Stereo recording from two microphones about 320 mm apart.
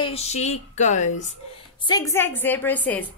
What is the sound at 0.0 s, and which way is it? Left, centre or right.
Speech, centre.